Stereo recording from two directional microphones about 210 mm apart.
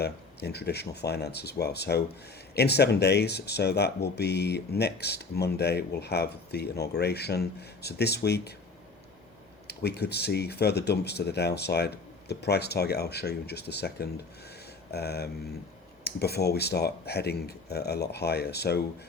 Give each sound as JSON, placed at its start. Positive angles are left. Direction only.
{"t": 0.0, "sound": "speech", "side_deg": 50}
{"t": 9.6, "sound": "speech", "side_deg": 50}